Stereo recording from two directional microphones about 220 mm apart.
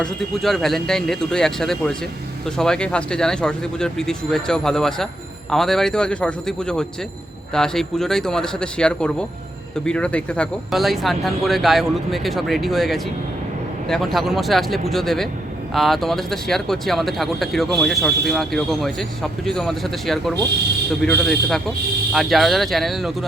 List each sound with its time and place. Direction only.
0.0 s speech: centre (ahead or behind)